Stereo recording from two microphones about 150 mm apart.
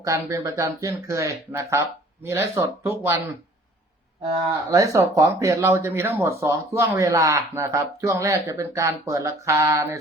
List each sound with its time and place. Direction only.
0.0 s speech: 20° right (ahead or behind)
4.7 s speech: 20° right (ahead or behind)